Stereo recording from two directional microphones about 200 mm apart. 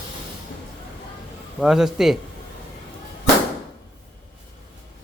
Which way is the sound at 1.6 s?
Centre (ahead or behind).